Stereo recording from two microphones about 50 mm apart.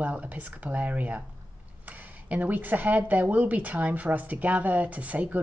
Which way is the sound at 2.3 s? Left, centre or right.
Right.